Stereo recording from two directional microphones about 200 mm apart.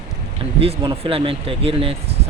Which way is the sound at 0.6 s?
30° right (ahead or behind).